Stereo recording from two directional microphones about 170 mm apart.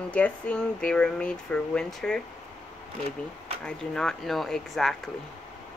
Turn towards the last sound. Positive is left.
turn(degrees=0)  # may be behind; listen again after turning